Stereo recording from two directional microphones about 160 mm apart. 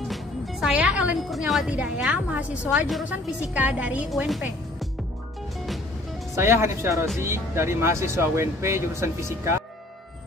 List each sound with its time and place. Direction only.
0.1 s a woman's voice: 5° right (ahead or behind)
6.3 s speech: 15° right (ahead or behind)